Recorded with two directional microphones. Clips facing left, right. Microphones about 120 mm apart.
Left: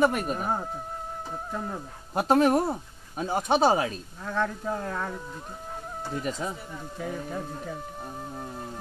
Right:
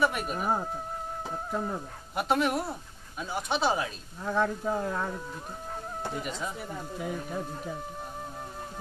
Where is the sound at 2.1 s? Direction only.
40° left (ahead or behind).